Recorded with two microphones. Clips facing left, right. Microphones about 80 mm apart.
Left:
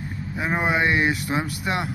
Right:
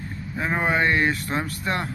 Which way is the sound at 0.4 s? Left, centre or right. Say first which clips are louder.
Even; centre.